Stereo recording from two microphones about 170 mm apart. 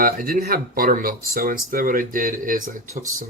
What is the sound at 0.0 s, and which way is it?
Speech, 55° right (ahead or behind).